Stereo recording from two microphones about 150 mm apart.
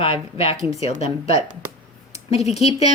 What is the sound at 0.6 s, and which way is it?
Speech, 20° right (ahead or behind).